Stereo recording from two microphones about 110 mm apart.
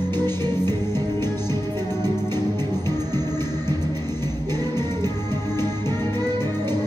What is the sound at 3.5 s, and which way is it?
Music, 35° right (ahead or behind).